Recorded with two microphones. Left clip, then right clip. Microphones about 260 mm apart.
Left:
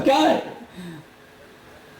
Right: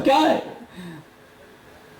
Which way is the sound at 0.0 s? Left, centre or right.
Centre.